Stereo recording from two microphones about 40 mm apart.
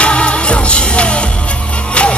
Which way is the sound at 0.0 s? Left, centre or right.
Left.